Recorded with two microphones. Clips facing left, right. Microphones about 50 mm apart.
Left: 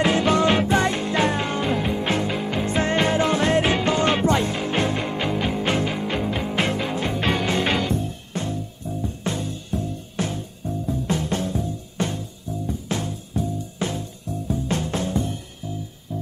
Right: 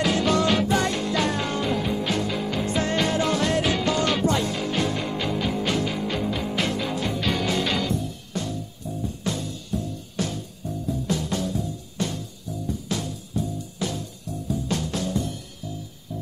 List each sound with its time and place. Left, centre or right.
0.0 s music: left